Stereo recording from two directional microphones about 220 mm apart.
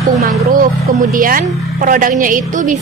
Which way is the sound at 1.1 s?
40° right (ahead or behind).